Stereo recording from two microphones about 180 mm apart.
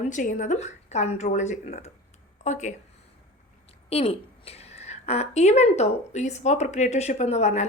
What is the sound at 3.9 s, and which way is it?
A woman's voice, 35° left (ahead or behind).